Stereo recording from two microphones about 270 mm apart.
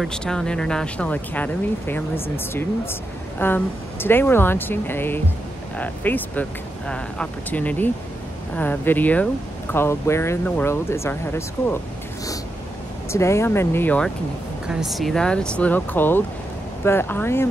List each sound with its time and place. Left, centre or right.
0.0 s speech: centre
13.1 s speech: centre